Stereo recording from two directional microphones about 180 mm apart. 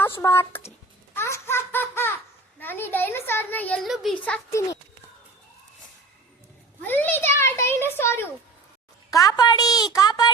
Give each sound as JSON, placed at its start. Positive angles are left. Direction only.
{"t": 0.0, "sound": "a child's voice", "side_deg": 15}
{"t": 1.1, "sound": "baby laughter", "side_deg": 15}
{"t": 2.6, "sound": "a child's voice", "side_deg": 10}
{"t": 3.8, "sound": "a child's voice", "side_deg": 0}
{"t": 6.8, "sound": "a child's voice", "side_deg": 10}